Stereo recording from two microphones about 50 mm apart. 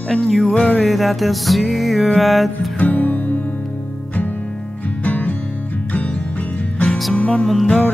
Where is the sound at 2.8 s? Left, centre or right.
Left.